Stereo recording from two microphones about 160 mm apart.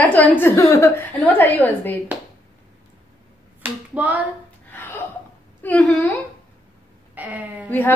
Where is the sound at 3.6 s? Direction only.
10° right (ahead or behind).